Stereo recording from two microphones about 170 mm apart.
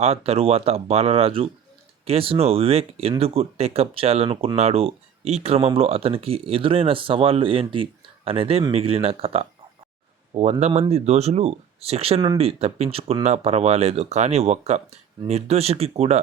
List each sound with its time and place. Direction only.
0.0 s speech: 35° right (ahead or behind)